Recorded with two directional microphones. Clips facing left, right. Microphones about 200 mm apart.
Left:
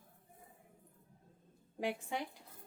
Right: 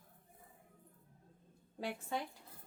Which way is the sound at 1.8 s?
15° left (ahead or behind).